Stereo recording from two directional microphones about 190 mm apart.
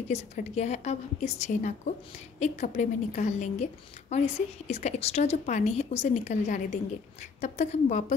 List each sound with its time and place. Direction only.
0.1 s a woman's voice: 35° left (ahead or behind)